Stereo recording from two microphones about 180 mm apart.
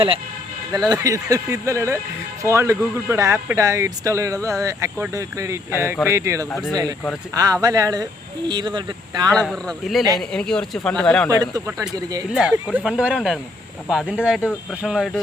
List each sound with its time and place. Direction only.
0.7 s speech: 20° right (ahead or behind)
9.3 s speech: 5° left (ahead or behind)
11.3 s speech: 20° right (ahead or behind)
12.3 s speech: 5° right (ahead or behind)